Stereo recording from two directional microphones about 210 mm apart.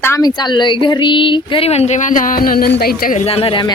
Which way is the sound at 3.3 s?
25° left (ahead or behind).